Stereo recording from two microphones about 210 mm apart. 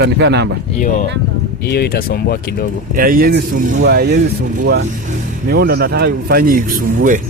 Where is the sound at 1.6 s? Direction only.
50° left (ahead or behind).